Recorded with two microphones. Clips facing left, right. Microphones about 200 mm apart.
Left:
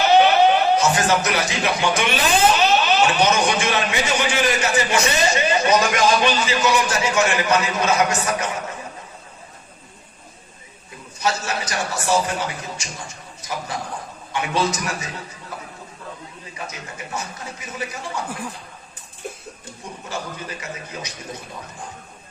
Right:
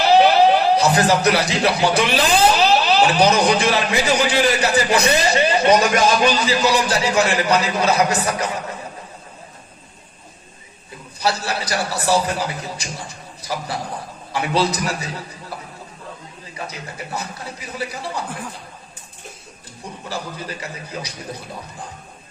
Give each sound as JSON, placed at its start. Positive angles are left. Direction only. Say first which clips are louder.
{"t": 0.0, "sound": "a man's voice", "louder": "right 1 dB", "side_deg": -35}
{"t": 11.2, "sound": "a man's voice", "louder": "right 1 dB", "side_deg": -35}
{"t": 16.6, "sound": "a man's voice", "louder": "right 3 dB", "side_deg": -35}
{"t": 20.1, "sound": "a man's voice", "louder": "right 2 dB", "side_deg": -35}